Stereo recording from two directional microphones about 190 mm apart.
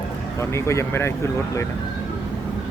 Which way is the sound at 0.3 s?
15° left (ahead or behind).